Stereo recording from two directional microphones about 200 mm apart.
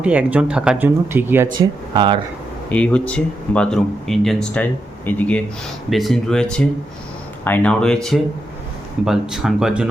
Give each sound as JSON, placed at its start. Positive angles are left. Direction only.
{"t": 0.0, "sound": "speech", "side_deg": -5}
{"t": 1.5, "sound": "speech", "side_deg": -25}
{"t": 2.6, "sound": "speech", "side_deg": 5}